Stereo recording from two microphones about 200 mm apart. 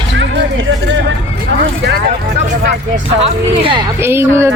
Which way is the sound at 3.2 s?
25° right (ahead or behind).